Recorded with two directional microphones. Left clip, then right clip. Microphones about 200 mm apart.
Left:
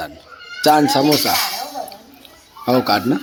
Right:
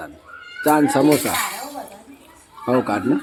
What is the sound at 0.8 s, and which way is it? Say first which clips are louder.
Speech: left 2 dB; centre (ahead or behind).